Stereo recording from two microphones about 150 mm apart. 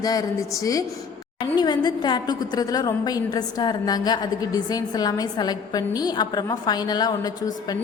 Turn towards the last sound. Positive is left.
turn(degrees=25)  # may be behind; listen again after turning